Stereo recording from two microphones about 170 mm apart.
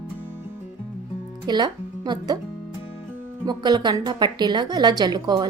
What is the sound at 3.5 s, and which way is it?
A woman's voice, 25° right (ahead or behind).